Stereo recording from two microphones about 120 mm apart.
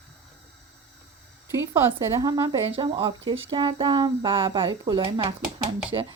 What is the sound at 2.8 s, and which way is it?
Speech, 45° right (ahead or behind).